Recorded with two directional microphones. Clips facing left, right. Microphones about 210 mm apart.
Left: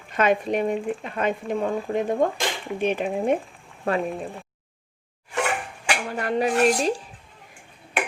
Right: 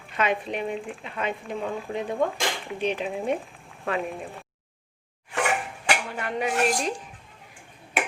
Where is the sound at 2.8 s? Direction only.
50° left (ahead or behind).